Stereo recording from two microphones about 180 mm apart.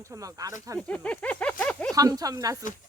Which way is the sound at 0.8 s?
5° left (ahead or behind).